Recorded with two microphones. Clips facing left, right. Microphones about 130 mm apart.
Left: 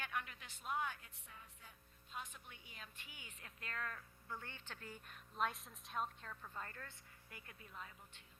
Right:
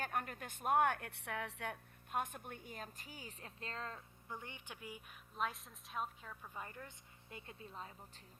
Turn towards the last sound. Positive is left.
turn(degrees=-30)  # may be behind; listen again after turning